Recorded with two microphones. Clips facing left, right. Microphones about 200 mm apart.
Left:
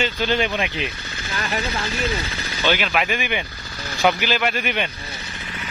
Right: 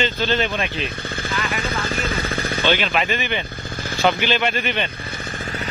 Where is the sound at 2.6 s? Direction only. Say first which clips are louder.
Even; 5° left (ahead or behind).